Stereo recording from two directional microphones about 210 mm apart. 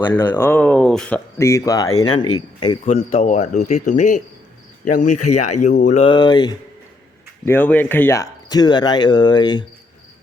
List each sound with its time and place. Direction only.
0.2 s speech: 20° left (ahead or behind)
0.4 s speech: 5° left (ahead or behind)
2.8 s speech: 35° left (ahead or behind)
7.4 s speech: 10° left (ahead or behind)